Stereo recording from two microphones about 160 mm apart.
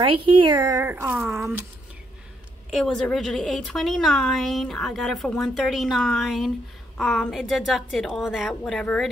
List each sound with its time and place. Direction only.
0.0 s speech: 30° right (ahead or behind)
0.8 s speech: 15° right (ahead or behind)
1.1 s a woman's voice: centre (ahead or behind)
2.7 s a woman's voice: 5° left (ahead or behind)